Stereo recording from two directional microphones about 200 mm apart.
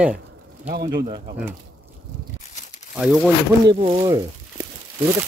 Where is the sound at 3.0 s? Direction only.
5° right (ahead or behind).